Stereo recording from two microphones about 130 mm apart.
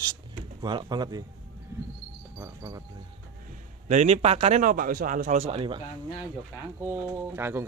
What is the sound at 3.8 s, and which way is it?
A man's voice, 60° right (ahead or behind).